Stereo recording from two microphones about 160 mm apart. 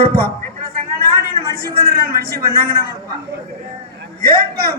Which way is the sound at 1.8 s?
70° right (ahead or behind).